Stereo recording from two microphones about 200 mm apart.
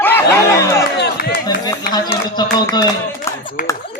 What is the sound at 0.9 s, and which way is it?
Music, 55° left (ahead or behind).